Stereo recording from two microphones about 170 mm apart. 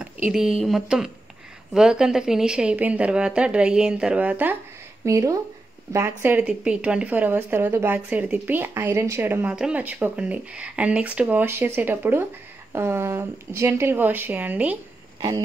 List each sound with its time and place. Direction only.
0.0 s a woman's voice: 5° right (ahead or behind)